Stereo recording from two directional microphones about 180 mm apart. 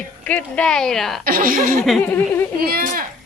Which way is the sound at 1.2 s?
55° right (ahead or behind).